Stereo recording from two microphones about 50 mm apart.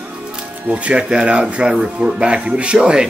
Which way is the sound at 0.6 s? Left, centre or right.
Right.